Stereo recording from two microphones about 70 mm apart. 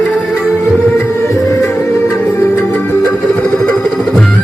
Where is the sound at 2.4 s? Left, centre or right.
Left.